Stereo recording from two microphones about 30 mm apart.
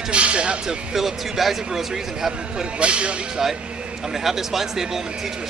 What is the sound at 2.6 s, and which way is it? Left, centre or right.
Speech, right.